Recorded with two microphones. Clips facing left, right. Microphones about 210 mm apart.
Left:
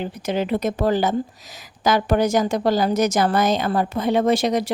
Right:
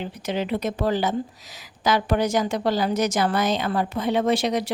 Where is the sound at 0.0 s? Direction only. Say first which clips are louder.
Left 3 dB; 45° left (ahead or behind).